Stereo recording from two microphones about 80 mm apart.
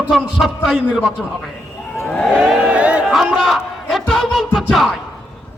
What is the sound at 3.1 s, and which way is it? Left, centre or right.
Speech, centre.